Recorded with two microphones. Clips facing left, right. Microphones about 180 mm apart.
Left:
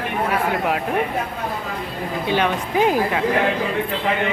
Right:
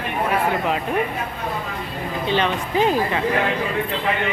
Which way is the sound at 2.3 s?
10° left (ahead or behind).